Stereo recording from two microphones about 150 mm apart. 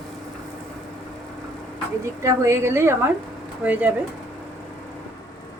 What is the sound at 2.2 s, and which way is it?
A woman's voice, 20° right (ahead or behind).